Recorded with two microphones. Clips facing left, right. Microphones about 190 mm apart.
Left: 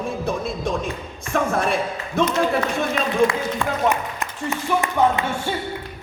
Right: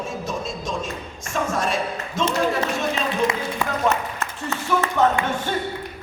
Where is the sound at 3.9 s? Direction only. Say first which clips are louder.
Even; 15° left (ahead or behind).